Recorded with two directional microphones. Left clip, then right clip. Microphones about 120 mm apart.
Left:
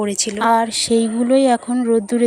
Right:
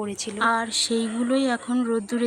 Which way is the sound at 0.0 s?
25° left (ahead or behind).